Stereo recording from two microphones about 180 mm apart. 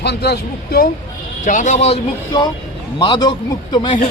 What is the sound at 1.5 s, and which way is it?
Speech, 40° left (ahead or behind).